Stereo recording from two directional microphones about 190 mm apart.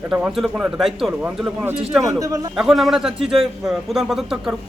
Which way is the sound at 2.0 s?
15° right (ahead or behind).